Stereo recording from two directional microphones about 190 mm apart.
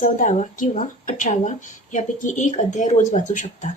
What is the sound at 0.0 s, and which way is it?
A woman's voice, 40° left (ahead or behind).